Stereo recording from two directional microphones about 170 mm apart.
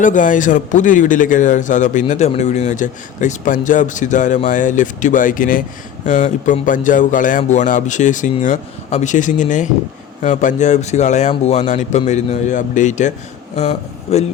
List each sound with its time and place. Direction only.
0.0 s a man's voice: 50° left (ahead or behind)